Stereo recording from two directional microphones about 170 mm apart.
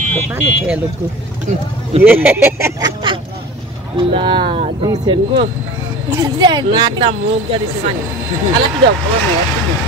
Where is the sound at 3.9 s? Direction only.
30° right (ahead or behind).